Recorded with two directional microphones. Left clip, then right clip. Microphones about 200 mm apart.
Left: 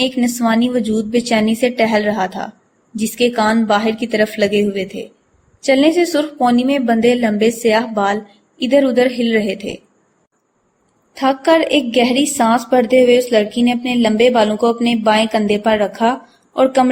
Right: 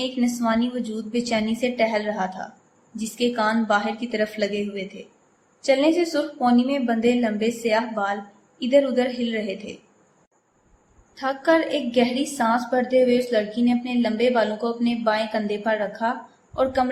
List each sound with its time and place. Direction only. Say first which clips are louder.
0.0 s a woman's voice: left 8 dB; 30° left (ahead or behind)
11.1 s a woman's voice: left 7 dB; 30° left (ahead or behind)